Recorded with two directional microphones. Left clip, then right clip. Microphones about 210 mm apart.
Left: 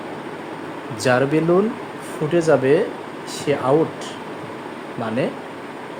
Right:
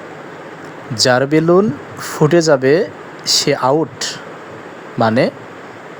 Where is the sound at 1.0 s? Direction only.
35° right (ahead or behind).